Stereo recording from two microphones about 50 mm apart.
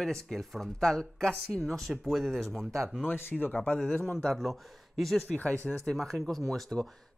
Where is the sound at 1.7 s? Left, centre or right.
Centre.